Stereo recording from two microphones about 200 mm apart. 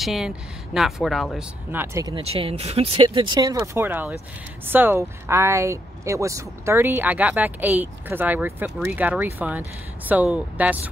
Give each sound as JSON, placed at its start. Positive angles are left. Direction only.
{"t": 0.0, "sound": "a woman's voice", "side_deg": 0}
{"t": 1.8, "sound": "speech", "side_deg": -15}
{"t": 2.1, "sound": "speech", "side_deg": -30}